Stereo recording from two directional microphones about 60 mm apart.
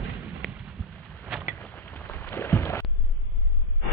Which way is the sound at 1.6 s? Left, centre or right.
Left.